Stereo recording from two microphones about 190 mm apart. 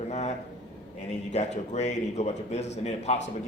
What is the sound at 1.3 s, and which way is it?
A man's voice, 35° left (ahead or behind).